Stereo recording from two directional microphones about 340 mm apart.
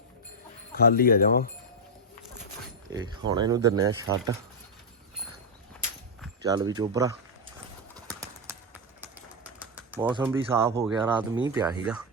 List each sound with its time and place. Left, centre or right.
0.7 s speech: left
2.9 s speech: centre
6.4 s speech: centre
7.9 s clip-clop: centre
9.0 s typing: centre
11.4 s speech: centre